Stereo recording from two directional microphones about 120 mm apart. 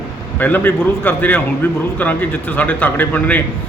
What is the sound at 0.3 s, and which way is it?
A man's voice, 15° left (ahead or behind).